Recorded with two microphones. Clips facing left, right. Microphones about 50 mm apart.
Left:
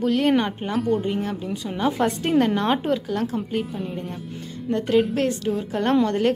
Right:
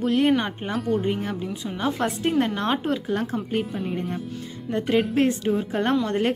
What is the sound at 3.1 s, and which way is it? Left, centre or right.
Speech, right.